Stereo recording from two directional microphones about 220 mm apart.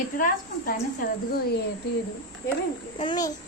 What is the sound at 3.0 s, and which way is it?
Speech, 20° left (ahead or behind).